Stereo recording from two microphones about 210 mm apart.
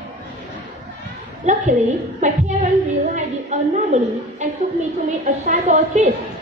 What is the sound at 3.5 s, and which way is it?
Speech, 30° right (ahead or behind).